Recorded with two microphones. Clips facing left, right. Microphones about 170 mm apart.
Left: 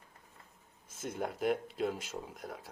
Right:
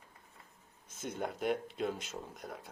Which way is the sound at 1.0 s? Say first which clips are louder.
Left 2 dB; centre (ahead or behind).